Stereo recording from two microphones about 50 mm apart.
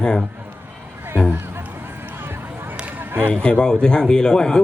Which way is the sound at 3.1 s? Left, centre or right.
Right.